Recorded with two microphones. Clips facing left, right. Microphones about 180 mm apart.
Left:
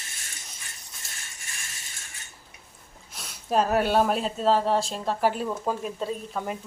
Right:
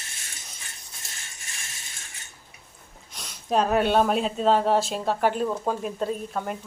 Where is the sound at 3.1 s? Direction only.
5° left (ahead or behind).